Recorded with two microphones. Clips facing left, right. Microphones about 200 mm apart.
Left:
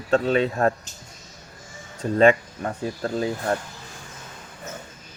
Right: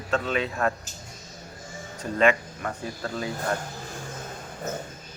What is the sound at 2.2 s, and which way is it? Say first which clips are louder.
Speech: left 5 dB; 35° left (ahead or behind).